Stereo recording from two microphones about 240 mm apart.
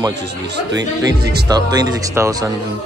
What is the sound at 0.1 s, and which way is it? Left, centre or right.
Speech, right.